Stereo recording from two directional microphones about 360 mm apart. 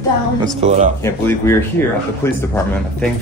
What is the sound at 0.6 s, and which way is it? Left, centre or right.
Speech, centre.